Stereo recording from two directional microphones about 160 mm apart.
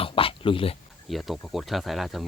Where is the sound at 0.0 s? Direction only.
35° left (ahead or behind).